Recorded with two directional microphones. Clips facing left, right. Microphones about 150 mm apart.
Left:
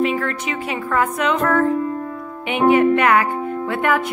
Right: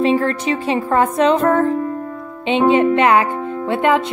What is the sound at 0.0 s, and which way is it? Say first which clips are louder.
Speech: right 4 dB; 30° right (ahead or behind).